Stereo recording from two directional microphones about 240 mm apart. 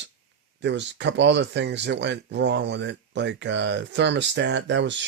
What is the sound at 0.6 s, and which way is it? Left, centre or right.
Speech, right.